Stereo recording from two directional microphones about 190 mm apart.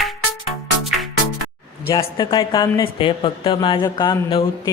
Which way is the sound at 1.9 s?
20° left (ahead or behind).